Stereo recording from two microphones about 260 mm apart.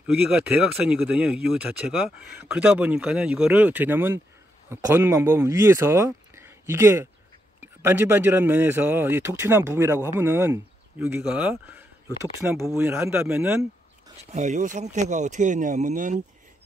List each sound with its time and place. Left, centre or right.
0.0 s speech: centre
14.3 s speech: right